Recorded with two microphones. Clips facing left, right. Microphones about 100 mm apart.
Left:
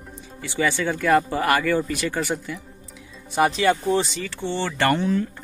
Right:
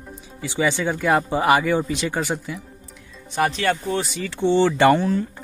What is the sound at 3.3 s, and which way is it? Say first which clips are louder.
Speech: left 2 dB; 5° left (ahead or behind).